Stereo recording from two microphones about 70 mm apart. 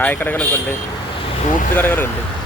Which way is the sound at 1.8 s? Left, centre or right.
Left.